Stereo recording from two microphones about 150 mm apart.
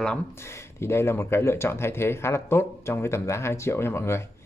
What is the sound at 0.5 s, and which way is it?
Speech, 15° left (ahead or behind).